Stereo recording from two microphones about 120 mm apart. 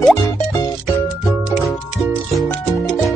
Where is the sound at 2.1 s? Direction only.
10° left (ahead or behind).